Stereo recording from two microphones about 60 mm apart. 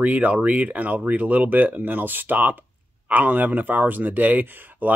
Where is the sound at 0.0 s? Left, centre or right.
Right.